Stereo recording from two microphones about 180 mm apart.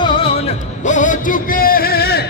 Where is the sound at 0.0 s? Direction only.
30° left (ahead or behind).